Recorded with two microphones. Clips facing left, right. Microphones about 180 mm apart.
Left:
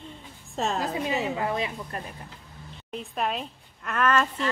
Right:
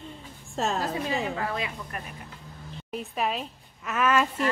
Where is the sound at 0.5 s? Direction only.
Centre (ahead or behind).